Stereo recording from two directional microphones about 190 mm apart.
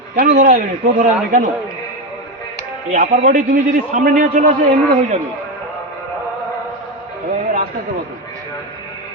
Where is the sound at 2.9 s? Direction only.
45° right (ahead or behind).